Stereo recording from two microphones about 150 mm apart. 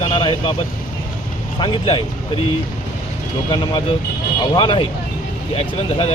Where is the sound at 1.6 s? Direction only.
35° left (ahead or behind).